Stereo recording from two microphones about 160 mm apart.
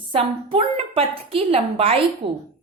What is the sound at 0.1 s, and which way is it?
A woman's voice, 35° right (ahead or behind).